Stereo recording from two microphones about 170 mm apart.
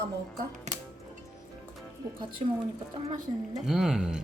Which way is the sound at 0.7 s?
45° right (ahead or behind).